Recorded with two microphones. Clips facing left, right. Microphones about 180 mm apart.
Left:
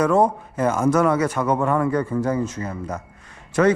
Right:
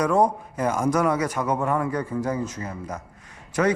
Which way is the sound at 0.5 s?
10° right (ahead or behind).